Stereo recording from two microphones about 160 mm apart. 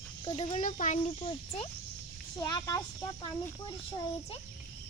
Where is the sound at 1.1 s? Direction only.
35° left (ahead or behind).